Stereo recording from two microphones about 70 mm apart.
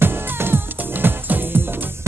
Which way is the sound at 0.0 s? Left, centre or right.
Right.